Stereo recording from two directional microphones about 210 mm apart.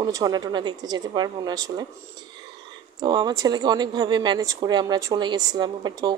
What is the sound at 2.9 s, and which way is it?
A woman's voice, 20° right (ahead or behind).